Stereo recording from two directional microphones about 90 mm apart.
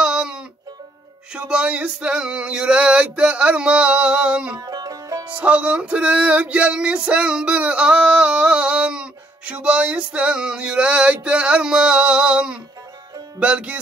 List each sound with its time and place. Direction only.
0.0 s music: 10° right (ahead or behind)
4.6 s music: 45° right (ahead or behind)
5.3 s music: 15° right (ahead or behind)